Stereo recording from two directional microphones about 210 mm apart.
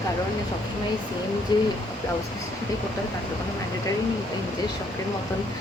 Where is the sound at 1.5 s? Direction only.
20° left (ahead or behind).